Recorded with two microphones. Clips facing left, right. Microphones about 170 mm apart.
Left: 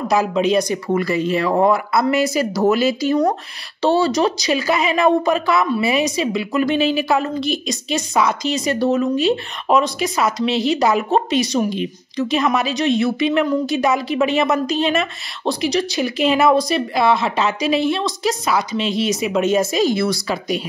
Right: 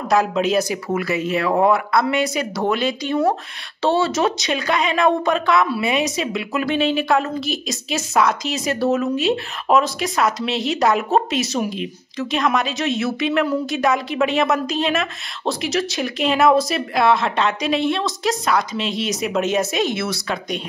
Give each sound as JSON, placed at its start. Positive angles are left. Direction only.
{"t": 0.1, "sound": "a woman's voice", "side_deg": 0}